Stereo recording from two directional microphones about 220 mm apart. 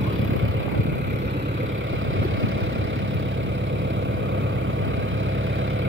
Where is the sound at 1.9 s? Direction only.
65° right (ahead or behind).